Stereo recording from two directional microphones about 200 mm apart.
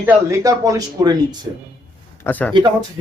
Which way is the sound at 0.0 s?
10° right (ahead or behind).